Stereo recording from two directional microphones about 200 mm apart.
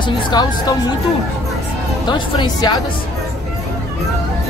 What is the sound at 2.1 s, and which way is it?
Speech, 20° left (ahead or behind).